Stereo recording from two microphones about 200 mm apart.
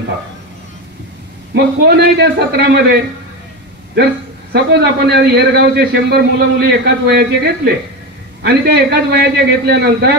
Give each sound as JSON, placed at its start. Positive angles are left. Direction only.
{"t": 1.5, "sound": "a man's voice", "side_deg": -55}
{"t": 4.5, "sound": "a man's voice", "side_deg": -55}